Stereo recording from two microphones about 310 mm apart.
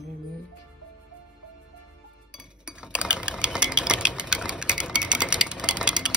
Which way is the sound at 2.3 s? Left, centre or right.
Centre.